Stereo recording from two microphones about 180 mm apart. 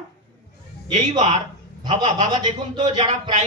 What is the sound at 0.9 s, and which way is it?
A man's voice, 35° right (ahead or behind).